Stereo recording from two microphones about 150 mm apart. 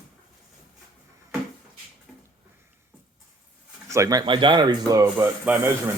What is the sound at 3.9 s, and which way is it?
Speech, 20° right (ahead or behind).